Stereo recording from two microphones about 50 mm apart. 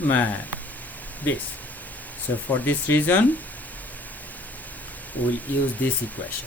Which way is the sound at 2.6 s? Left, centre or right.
Left.